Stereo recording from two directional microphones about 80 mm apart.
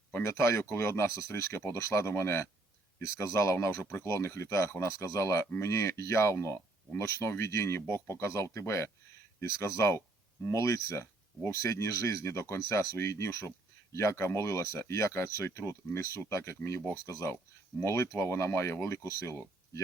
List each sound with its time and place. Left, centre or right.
0.1 s speech: left